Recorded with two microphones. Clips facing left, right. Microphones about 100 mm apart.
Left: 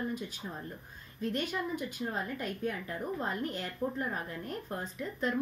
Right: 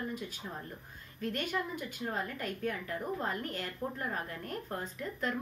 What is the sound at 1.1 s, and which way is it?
A woman's voice, 20° left (ahead or behind).